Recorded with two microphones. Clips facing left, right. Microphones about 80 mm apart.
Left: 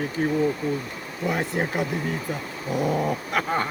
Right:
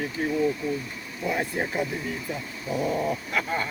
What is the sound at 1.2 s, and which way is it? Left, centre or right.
Speech, left.